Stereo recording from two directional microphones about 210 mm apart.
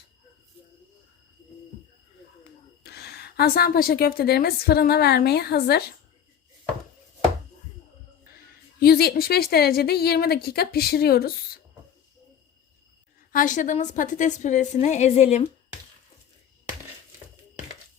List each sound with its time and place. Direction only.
2.8 s a woman's voice: 50° left (ahead or behind)
8.4 s a woman's voice: 45° left (ahead or behind)
13.3 s a woman's voice: 40° left (ahead or behind)